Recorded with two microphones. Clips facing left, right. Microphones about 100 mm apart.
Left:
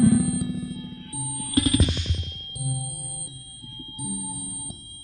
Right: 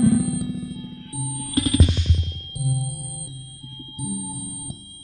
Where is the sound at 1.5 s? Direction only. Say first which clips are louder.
Right 1 dB; 5° right (ahead or behind).